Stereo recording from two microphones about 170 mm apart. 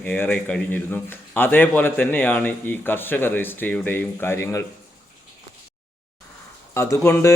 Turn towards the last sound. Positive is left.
turn(degrees=15)  # may be behind; listen again after turning